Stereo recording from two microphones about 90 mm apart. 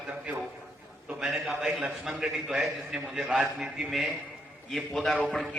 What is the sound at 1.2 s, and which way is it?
A man's voice, 5° right (ahead or behind).